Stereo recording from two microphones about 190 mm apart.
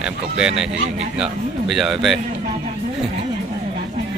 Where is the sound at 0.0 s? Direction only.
5° right (ahead or behind).